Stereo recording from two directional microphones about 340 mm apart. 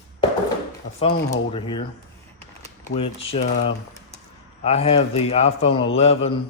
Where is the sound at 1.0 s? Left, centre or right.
Centre.